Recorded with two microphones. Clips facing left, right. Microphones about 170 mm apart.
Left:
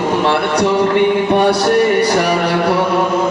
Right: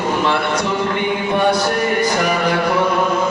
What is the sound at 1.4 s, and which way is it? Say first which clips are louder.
Music: left 5 dB; 70° left (ahead or behind).